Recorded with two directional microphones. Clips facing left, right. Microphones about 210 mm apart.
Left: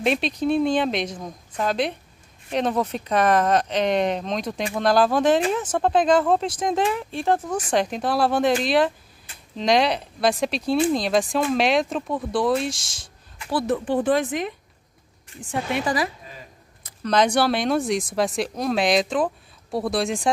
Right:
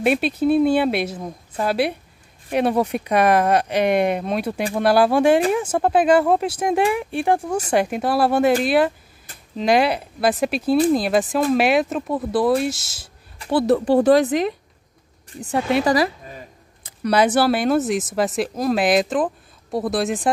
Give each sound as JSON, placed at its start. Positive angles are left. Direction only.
{"t": 0.0, "sound": "speech", "side_deg": -5}
{"t": 13.4, "sound": "a woman's voice", "side_deg": -30}
{"t": 17.0, "sound": "speech", "side_deg": -10}